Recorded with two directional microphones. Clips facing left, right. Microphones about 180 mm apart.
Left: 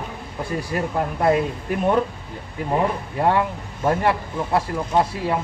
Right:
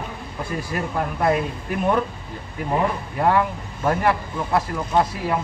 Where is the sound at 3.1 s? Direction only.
25° left (ahead or behind).